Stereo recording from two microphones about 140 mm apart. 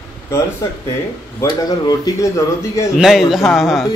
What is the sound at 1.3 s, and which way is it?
Speech, 25° left (ahead or behind).